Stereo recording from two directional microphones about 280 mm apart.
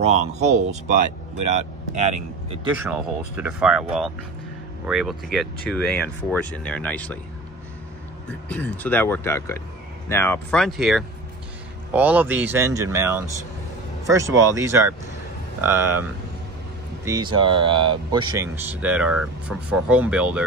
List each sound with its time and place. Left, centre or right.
0.0 s speech: right
2.0 s speech: right
2.9 s speech: centre
8.3 s speech: centre